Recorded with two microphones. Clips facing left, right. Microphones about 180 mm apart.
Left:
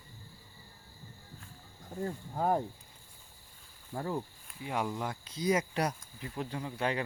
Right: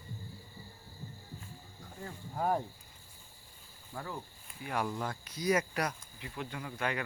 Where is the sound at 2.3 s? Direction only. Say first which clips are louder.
Left 2 dB; 15° left (ahead or behind).